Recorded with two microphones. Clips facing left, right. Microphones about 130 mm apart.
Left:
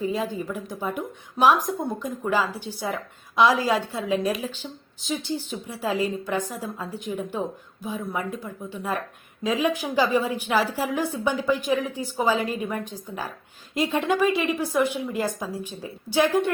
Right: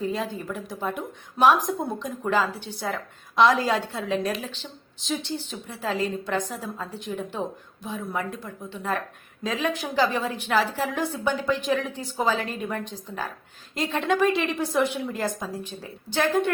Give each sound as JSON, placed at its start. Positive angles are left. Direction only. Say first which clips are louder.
{"t": 0.0, "sound": "a woman's voice", "louder": "left 2 dB", "side_deg": 0}